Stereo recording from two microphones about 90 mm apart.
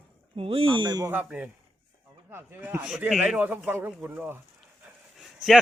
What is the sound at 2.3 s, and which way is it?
A man's voice, 25° right (ahead or behind).